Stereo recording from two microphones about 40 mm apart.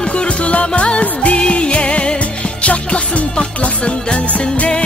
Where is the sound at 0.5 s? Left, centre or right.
Left.